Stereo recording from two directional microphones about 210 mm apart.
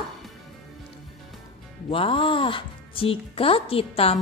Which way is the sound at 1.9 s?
25° left (ahead or behind).